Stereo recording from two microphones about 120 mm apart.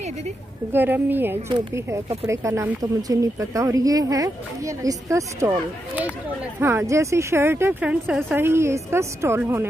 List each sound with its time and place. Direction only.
0.7 s speech: 15° right (ahead or behind)
5.9 s speech: 15° right (ahead or behind)